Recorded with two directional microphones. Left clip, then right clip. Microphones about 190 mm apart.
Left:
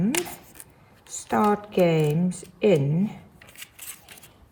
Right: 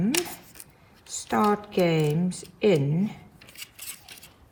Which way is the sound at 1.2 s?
15° left (ahead or behind).